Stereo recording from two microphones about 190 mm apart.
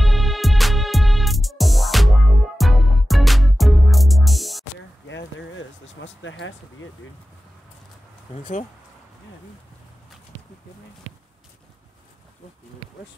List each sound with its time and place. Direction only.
0.0 s music: centre (ahead or behind)
5.0 s a sound: 75° left (ahead or behind)
8.3 s speech: 30° left (ahead or behind)